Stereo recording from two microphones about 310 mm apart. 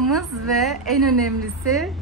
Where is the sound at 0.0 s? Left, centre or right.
Centre.